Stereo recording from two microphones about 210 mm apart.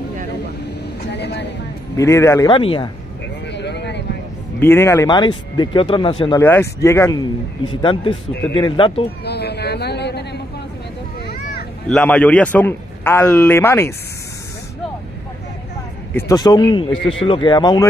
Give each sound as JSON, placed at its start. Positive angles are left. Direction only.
{"t": 1.0, "sound": "a sound", "side_deg": 55}
{"t": 2.0, "sound": "a man's voice", "side_deg": 15}
{"t": 3.5, "sound": "vehicle", "side_deg": 55}
{"t": 4.6, "sound": "speech", "side_deg": 10}
{"t": 6.4, "sound": "a man's voice", "side_deg": 10}
{"t": 9.2, "sound": "a sound", "side_deg": 50}
{"t": 11.9, "sound": "a man's voice", "side_deg": 5}
{"t": 16.1, "sound": "speech", "side_deg": 15}